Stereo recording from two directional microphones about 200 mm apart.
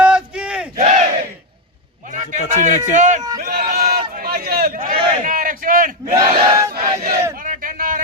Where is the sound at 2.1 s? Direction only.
35° right (ahead or behind).